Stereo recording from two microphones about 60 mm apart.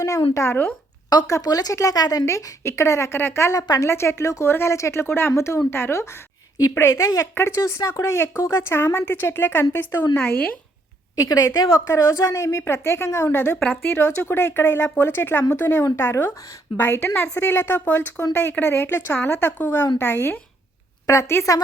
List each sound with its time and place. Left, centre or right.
0.0 s a woman's voice: left
1.1 s speech: left
2.6 s a woman's voice: left
3.2 s speech: left
7.0 s speech: left
7.3 s a woman's voice: left
11.1 s a woman's voice: left
13.8 s a woman's voice: left
15.8 s speech: left
16.3 s a woman's voice: left
16.7 s a woman's voice: left
21.1 s speech: left